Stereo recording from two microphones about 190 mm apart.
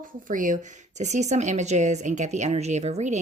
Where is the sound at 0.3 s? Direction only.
45° right (ahead or behind).